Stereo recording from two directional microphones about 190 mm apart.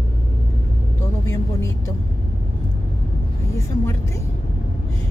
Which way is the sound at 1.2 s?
15° left (ahead or behind).